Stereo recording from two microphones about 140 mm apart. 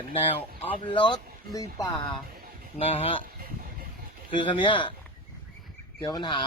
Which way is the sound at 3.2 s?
90° right.